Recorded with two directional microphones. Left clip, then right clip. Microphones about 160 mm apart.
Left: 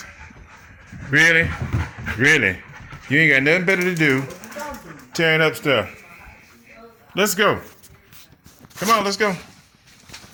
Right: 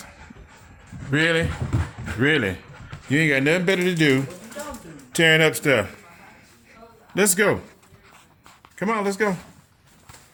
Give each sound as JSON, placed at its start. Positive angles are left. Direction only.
{"t": 1.2, "sound": "speech", "side_deg": -10}
{"t": 7.2, "sound": "speech", "side_deg": -25}
{"t": 8.8, "sound": "speech", "side_deg": -15}